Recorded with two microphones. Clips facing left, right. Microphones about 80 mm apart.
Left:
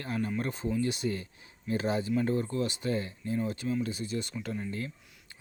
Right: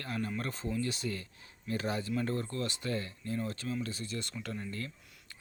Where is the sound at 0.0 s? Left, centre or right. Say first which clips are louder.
Left 4 dB; left.